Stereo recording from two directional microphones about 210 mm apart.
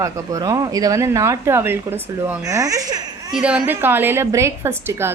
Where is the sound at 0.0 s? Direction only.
15° right (ahead or behind).